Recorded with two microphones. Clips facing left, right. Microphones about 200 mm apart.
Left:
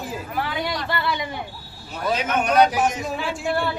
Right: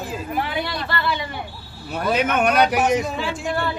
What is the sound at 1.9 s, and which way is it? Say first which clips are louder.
A man's voice: right 3 dB; 60° right (ahead or behind).